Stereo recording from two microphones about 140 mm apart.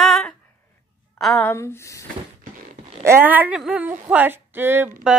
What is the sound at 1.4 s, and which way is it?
Speech, 15° left (ahead or behind).